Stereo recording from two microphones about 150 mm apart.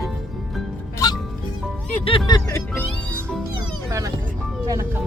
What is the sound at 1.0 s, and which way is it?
Music, 25° left (ahead or behind).